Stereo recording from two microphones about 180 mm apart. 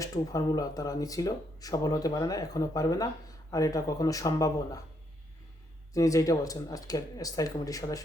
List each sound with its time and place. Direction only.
0.0 s speech: 20° left (ahead or behind)
5.9 s speech: 20° left (ahead or behind)